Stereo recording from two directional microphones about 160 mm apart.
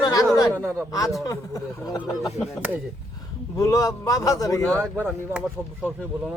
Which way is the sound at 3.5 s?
20° left (ahead or behind).